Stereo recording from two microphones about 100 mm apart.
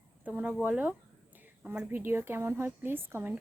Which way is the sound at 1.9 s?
25° right (ahead or behind).